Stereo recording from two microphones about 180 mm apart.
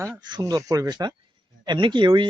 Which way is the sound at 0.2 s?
25° right (ahead or behind).